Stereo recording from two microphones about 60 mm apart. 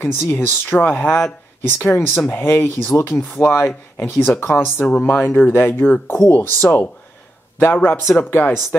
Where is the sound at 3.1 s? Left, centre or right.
Left.